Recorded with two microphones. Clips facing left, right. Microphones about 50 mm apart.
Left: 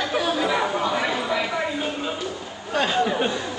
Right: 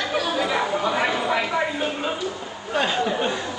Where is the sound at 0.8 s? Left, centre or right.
Centre.